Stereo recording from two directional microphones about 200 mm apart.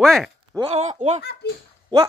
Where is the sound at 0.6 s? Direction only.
30° right (ahead or behind).